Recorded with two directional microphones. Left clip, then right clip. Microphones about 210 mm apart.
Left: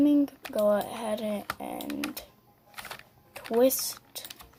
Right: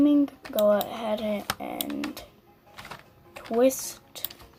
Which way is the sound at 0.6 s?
15° left (ahead or behind).